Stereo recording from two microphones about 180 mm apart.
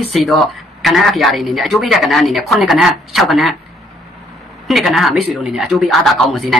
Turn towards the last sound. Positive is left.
turn(degrees=0)  # may be behind; listen again after turning